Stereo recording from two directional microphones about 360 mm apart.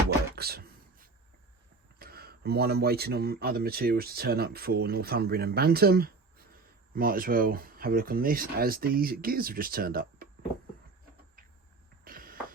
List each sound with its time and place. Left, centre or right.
0.3 s chopping: right
2.0 s speech: right
12.0 s a sound: right